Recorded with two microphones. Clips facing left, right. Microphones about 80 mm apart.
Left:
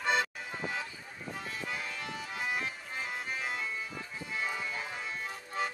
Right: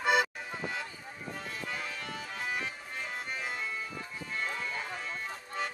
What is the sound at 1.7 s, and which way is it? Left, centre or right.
Music, centre.